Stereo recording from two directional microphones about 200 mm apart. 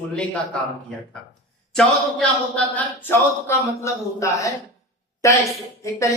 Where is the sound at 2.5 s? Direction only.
10° left (ahead or behind).